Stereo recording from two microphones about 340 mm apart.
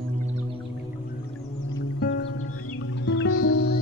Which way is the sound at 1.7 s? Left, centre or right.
Left.